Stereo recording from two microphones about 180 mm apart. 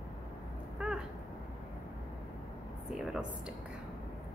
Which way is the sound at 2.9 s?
5° right (ahead or behind).